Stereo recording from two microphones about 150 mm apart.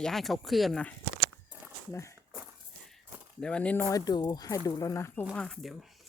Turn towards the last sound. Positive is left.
turn(degrees=0)  # may be behind; listen again after turning